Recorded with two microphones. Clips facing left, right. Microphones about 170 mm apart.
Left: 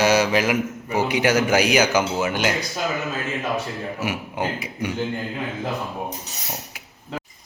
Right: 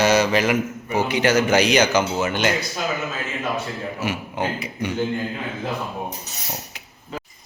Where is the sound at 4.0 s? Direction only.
10° left (ahead or behind).